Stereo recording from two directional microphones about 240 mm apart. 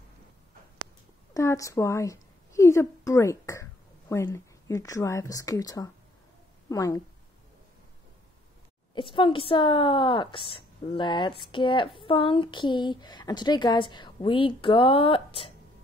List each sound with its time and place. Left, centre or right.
1.3 s a woman's voice: centre
8.9 s speech: centre